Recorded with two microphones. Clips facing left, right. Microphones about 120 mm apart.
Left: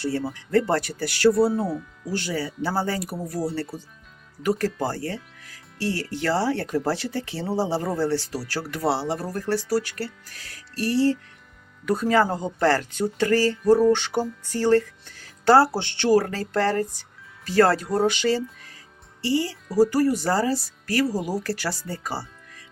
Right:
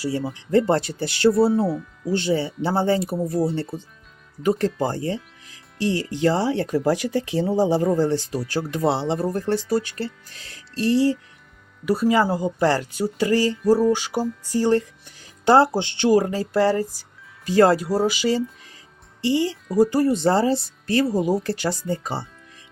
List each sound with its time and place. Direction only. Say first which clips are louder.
0.0 s speech: right 1 dB; 15° right (ahead or behind)
1.5 s speech: right 4 dB; centre (ahead or behind)
2.1 s speech: right 5 dB; 25° right (ahead or behind)
17.8 s speech: right 1 dB; 5° right (ahead or behind)
18.3 s speech: right 1 dB; 15° right (ahead or behind)